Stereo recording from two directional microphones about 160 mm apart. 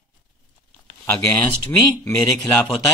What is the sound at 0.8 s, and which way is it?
Speech, 15° left (ahead or behind).